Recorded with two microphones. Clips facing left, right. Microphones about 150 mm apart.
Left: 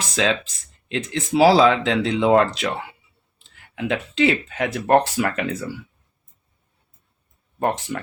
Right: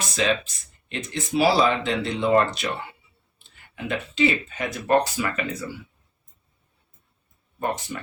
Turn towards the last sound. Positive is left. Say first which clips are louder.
# left 5 dB
turn(degrees=85)